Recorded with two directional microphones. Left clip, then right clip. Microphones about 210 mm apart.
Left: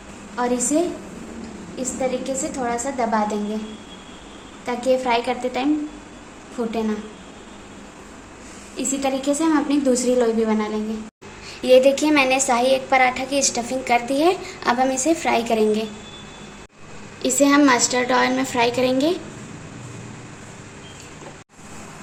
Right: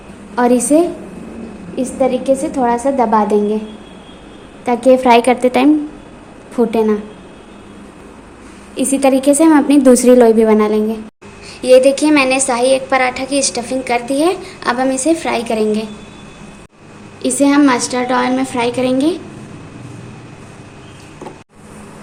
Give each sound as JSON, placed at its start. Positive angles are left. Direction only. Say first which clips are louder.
{"t": 0.3, "sound": "a woman's voice", "louder": "right 9 dB", "side_deg": -40}
{"t": 4.6, "sound": "a woman's voice", "louder": "right 10 dB", "side_deg": -35}
{"t": 8.7, "sound": "a woman's voice", "louder": "right 10 dB", "side_deg": -40}
{"t": 11.6, "sound": "a woman's voice", "louder": "right 6 dB", "side_deg": 0}
{"t": 17.2, "sound": "a woman's voice", "louder": "right 4 dB", "side_deg": 0}